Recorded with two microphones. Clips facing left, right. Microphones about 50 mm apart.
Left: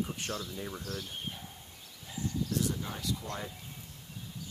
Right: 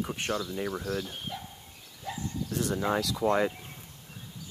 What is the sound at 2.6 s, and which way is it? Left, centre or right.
Speech, right.